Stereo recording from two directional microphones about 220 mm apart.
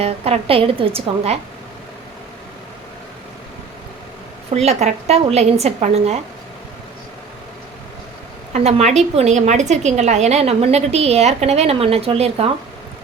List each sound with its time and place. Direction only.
0.0 s a woman's voice: 25° right (ahead or behind)
4.5 s a woman's voice: 30° right (ahead or behind)
8.5 s a woman's voice: 30° right (ahead or behind)